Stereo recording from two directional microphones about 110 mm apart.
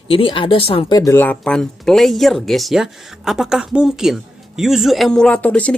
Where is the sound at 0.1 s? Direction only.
55° left (ahead or behind).